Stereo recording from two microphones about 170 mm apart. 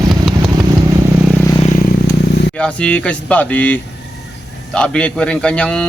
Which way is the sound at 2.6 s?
5° left (ahead or behind).